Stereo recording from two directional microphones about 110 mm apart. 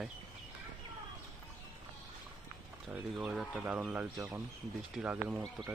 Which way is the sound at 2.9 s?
10° right (ahead or behind).